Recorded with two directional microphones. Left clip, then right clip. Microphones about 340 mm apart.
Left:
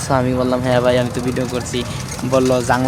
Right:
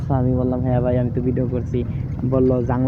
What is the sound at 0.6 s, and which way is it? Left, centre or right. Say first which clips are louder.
Speech: left 10 dB; centre.